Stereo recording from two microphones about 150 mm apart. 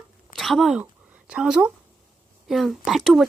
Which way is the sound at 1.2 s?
5° right (ahead or behind).